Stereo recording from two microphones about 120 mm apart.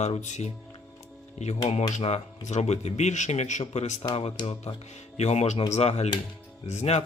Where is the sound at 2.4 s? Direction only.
70° left (ahead or behind).